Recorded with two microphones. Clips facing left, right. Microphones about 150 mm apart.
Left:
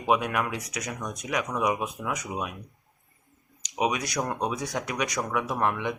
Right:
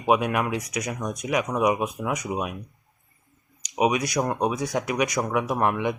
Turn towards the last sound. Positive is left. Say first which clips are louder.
# right 4 dB
turn(degrees=-15)  # may be behind; listen again after turning